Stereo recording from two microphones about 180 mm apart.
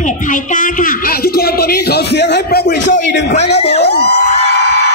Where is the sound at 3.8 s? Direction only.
65° left (ahead or behind).